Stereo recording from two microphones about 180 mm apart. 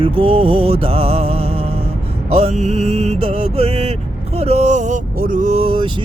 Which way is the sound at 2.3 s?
35° right (ahead or behind).